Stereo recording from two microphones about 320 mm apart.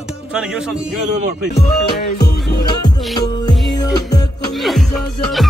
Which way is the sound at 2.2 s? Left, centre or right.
Left.